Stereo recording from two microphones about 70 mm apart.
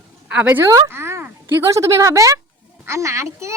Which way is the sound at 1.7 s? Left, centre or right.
Right.